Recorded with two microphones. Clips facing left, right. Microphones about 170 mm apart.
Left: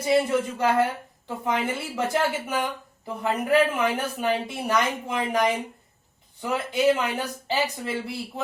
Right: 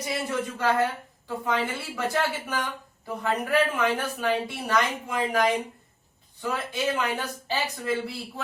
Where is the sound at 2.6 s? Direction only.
20° left (ahead or behind).